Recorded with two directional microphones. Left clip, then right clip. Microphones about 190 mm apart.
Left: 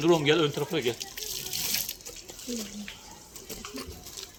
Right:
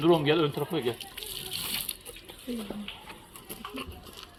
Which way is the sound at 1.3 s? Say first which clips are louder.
Left 2 dB; 15° left (ahead or behind).